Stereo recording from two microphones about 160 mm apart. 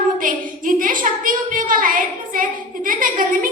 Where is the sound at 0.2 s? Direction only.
55° right (ahead or behind).